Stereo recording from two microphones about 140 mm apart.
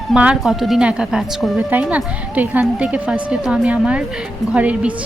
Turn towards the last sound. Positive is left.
turn(degrees=-10)  # may be behind; listen again after turning